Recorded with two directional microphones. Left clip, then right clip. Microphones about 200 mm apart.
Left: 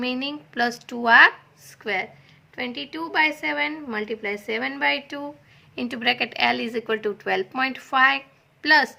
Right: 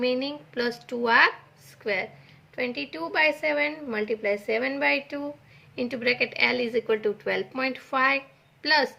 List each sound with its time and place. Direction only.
0.0 s a woman's voice: 40° left (ahead or behind)